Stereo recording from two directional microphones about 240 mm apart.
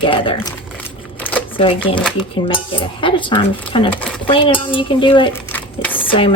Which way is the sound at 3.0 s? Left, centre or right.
Left.